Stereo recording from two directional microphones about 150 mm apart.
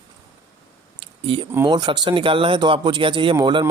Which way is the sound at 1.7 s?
30° right (ahead or behind).